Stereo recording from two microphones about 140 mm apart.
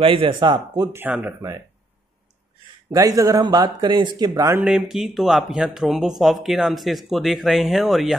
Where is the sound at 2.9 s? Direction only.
25° right (ahead or behind).